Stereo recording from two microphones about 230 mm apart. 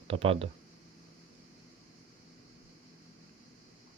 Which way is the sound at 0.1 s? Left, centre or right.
Right.